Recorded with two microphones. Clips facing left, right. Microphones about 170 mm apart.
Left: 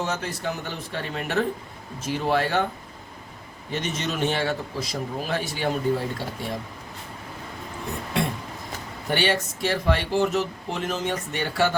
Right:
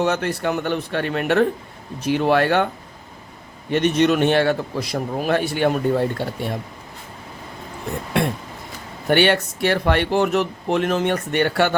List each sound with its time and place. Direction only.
0.0 s speech: 65° right (ahead or behind)
3.7 s speech: 65° right (ahead or behind)
9.0 s speech: 65° right (ahead or behind)